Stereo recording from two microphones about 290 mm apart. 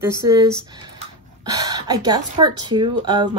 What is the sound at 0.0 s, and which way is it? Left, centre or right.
Speech, centre.